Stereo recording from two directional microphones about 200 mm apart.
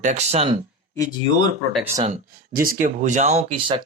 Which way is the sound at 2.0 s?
40° right (ahead or behind).